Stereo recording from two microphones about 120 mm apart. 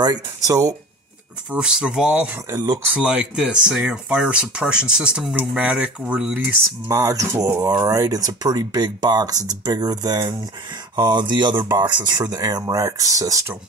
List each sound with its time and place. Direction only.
0.0 s speech: 30° right (ahead or behind)
1.5 s speech: 5° right (ahead or behind)
2.5 s speech: 35° right (ahead or behind)
2.9 s speech: 10° right (ahead or behind)
6.9 s speech: 30° right (ahead or behind)